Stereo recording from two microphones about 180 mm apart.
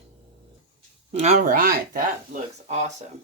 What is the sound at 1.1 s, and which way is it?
Speech, 40° right (ahead or behind).